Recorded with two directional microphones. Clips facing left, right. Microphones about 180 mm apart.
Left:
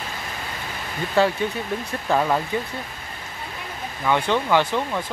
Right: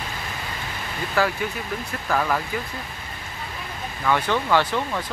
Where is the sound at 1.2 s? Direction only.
25° left (ahead or behind).